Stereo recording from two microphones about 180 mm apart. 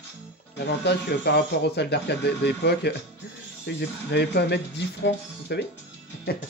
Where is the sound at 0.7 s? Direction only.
70° left (ahead or behind).